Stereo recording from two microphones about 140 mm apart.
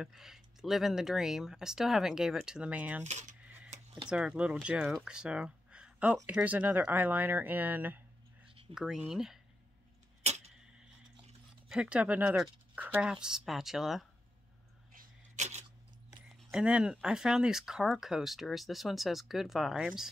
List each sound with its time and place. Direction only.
0.0 s speech: centre (ahead or behind)
3.0 s speech: 55° right (ahead or behind)
3.4 s a sound: 10° right (ahead or behind)
4.1 s speech: 5° right (ahead or behind)
10.2 s tick-tock: 50° right (ahead or behind)
11.7 s speech: 5° right (ahead or behind)
15.0 s a sound: 55° right (ahead or behind)
16.3 s a sound: centre (ahead or behind)
16.6 s speech: 10° right (ahead or behind)